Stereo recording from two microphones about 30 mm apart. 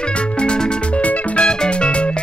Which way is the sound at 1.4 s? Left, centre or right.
Left.